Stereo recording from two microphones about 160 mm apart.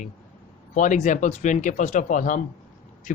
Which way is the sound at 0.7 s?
50° left (ahead or behind).